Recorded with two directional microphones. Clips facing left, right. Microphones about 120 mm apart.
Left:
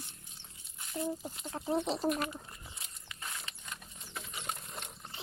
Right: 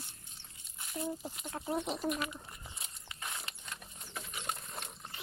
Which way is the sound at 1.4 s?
20° left (ahead or behind).